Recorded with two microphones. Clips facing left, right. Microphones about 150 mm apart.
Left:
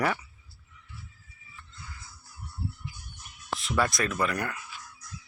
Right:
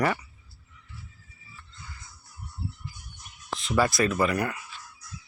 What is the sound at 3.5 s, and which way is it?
Speech, centre (ahead or behind).